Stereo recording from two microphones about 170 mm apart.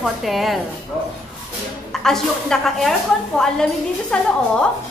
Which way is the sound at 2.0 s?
5° left (ahead or behind).